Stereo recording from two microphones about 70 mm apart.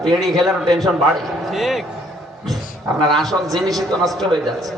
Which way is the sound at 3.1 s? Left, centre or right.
Centre.